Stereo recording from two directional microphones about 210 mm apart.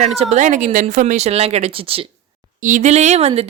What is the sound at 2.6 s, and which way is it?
Speech, 35° right (ahead or behind).